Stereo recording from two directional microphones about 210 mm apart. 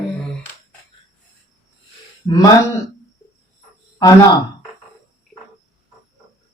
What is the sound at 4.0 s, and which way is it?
Speech, 15° left (ahead or behind).